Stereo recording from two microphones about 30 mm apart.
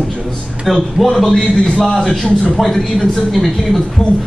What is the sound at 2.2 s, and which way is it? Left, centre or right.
Speech, centre.